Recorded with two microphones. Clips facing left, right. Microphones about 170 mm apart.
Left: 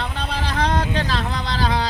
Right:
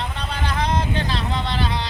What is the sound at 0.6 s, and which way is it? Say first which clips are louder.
Vehicle: left 2 dB; 80° left.